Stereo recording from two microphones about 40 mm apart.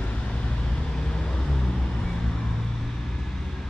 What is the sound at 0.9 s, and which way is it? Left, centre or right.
Vehicle, left.